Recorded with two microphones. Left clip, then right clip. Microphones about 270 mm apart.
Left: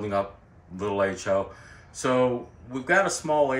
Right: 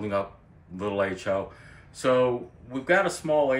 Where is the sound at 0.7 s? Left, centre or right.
Centre.